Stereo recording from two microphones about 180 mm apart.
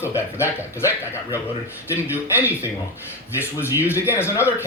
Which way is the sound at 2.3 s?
10° right (ahead or behind).